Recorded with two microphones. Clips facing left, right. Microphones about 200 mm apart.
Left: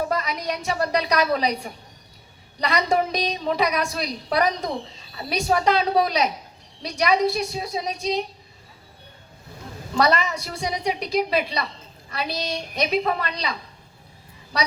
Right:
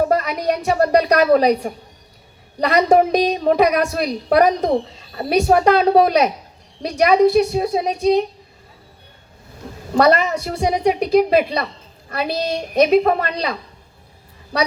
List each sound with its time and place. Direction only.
0.0 s a woman's voice: 55° right (ahead or behind)
9.9 s a woman's voice: 55° right (ahead or behind)